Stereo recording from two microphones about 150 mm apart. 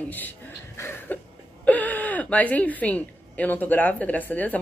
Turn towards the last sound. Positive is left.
turn(degrees=10)  # may be behind; listen again after turning